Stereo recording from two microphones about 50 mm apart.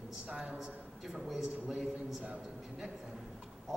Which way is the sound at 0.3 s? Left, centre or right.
Centre.